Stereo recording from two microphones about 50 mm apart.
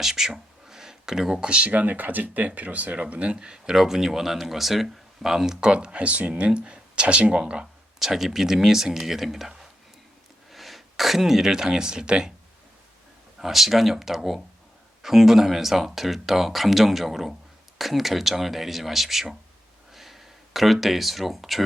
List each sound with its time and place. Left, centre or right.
0.0 s speech: centre
7.9 s speech: centre
13.4 s speech: centre
19.9 s a sound: centre
20.8 s speech: centre